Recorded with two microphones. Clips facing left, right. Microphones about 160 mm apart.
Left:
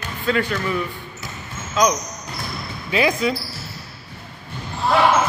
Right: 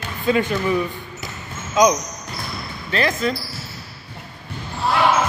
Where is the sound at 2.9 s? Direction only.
10° left (ahead or behind).